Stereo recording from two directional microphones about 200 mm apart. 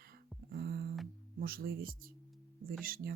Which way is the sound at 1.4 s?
50° right (ahead or behind).